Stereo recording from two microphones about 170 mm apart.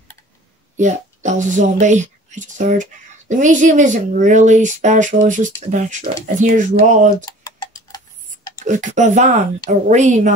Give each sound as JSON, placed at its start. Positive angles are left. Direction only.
{"t": 0.7, "sound": "speech", "side_deg": -45}
{"t": 7.2, "sound": "tick-tock", "side_deg": 25}
{"t": 8.6, "sound": "speech", "side_deg": -45}